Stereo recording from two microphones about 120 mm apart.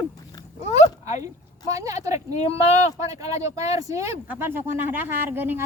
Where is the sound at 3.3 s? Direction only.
65° left (ahead or behind).